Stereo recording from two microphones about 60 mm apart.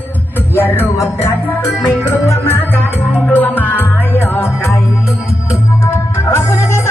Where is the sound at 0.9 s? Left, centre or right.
Left.